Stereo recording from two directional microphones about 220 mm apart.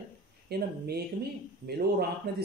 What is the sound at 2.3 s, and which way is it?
Speech, 50° right (ahead or behind).